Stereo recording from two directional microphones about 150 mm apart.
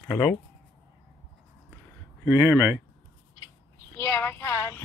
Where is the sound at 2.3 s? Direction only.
15° right (ahead or behind).